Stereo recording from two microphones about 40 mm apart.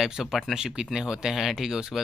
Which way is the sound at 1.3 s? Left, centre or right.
Centre.